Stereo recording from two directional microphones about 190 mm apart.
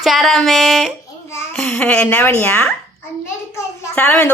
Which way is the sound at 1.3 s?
10° left (ahead or behind).